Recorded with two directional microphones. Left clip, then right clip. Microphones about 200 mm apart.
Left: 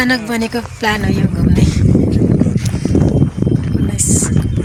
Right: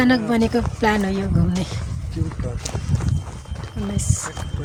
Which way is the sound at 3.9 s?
5° left (ahead or behind).